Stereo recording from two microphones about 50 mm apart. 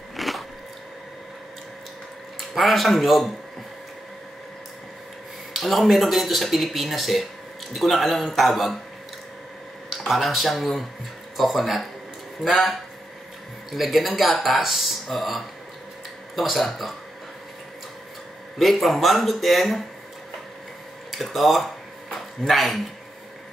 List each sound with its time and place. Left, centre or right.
0.1 s a sound: centre
2.5 s speech: centre
5.6 s speech: centre
10.0 s speech: centre
18.6 s speech: centre
21.1 s speech: centre